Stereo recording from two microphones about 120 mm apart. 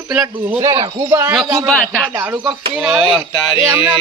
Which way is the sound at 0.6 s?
30° right (ahead or behind).